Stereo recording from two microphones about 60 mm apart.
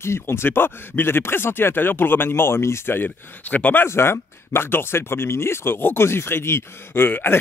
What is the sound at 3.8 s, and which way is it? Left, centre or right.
Speech, left.